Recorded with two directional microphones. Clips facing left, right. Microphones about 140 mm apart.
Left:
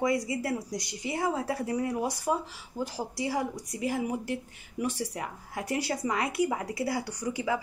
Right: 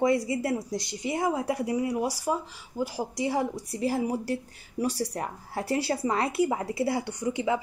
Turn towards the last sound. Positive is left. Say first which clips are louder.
# right 3 dB
turn(degrees=-25)  # may be behind; listen again after turning